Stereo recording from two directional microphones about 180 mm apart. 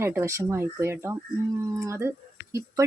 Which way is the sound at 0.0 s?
15° right (ahead or behind).